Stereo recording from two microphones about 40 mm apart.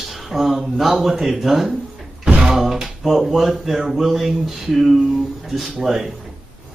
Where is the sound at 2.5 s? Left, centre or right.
Centre.